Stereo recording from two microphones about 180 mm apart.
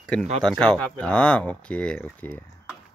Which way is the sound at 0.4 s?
5° left (ahead or behind).